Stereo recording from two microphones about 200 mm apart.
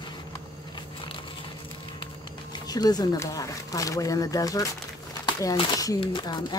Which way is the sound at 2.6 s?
20° left (ahead or behind).